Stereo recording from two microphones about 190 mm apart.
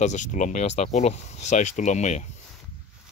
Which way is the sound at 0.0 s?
40° left (ahead or behind).